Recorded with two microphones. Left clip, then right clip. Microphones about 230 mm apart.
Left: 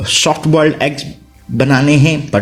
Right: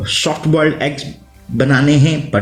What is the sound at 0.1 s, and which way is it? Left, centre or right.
A man's voice, left.